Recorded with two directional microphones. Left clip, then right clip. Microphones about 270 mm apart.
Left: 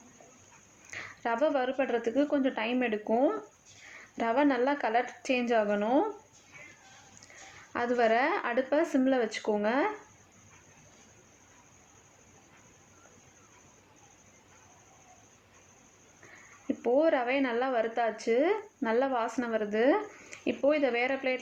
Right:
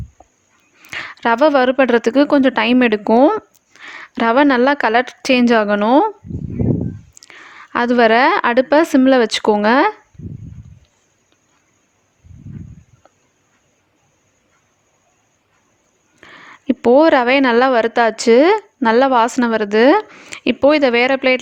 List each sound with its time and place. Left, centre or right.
0.9 s a woman's voice: right
7.7 s a woman's voice: right
16.2 s a sound: right
16.6 s a woman's voice: right